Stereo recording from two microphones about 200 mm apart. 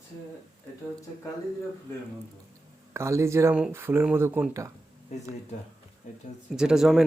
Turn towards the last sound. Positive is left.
turn(degrees=0)  # may be behind; listen again after turning